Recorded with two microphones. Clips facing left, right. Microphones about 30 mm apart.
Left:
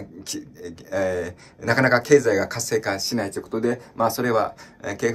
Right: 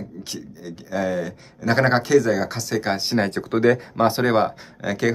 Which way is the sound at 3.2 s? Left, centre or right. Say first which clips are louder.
Right 5 dB; right.